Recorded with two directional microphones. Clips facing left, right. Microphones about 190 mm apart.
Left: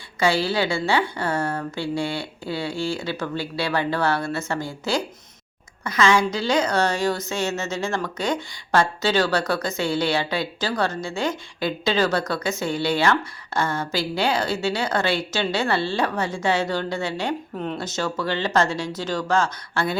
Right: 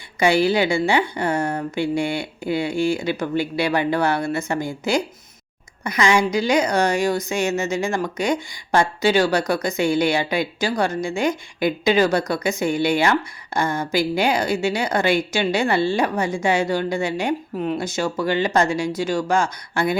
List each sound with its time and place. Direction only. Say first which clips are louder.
0.2 s a woman's voice: right 4 dB; 15° right (ahead or behind)